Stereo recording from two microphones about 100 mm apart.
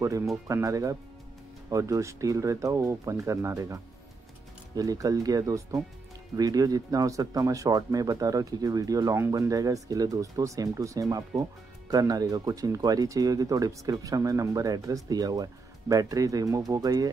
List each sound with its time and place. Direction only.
0.0 s speech: 30° right (ahead or behind)